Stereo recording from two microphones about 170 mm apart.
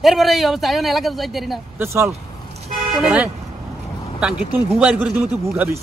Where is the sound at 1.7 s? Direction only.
15° right (ahead or behind).